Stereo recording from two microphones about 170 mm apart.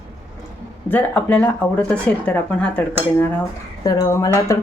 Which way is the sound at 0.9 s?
10° left (ahead or behind).